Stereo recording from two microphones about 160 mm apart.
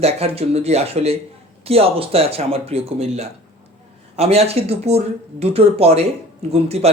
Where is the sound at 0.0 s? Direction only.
40° right (ahead or behind).